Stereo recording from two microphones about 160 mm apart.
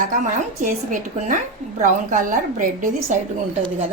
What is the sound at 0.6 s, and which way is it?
A woman's voice, 55° right (ahead or behind).